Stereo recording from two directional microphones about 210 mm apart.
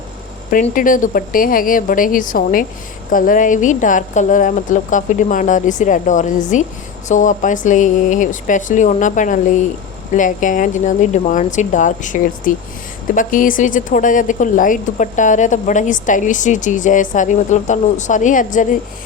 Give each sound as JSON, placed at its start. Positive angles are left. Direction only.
{"t": 0.5, "sound": "a woman's voice", "side_deg": 40}